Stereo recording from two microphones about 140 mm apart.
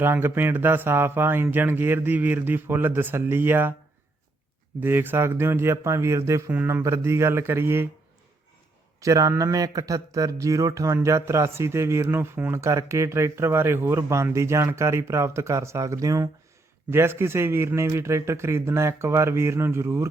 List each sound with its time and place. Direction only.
0.0 s speech: 15° right (ahead or behind)
4.8 s speech: 15° right (ahead or behind)
9.0 s speech: 25° right (ahead or behind)